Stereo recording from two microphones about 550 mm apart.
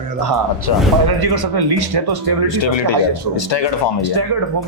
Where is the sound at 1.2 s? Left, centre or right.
Right.